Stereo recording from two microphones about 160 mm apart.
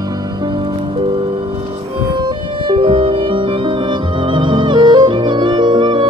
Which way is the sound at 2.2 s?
30° right (ahead or behind).